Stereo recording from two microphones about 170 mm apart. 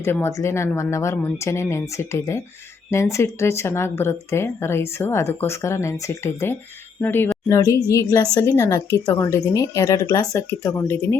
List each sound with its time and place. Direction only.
0.0 s a woman's voice: 15° left (ahead or behind)